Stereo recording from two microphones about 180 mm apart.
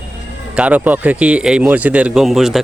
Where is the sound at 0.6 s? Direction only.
10° right (ahead or behind).